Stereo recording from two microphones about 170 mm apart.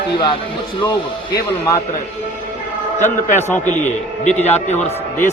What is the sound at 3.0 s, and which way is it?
A man's voice, 45° left (ahead or behind).